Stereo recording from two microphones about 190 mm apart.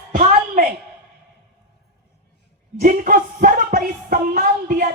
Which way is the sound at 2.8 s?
45° right (ahead or behind).